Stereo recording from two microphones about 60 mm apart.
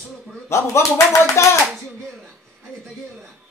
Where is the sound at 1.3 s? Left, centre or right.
Left.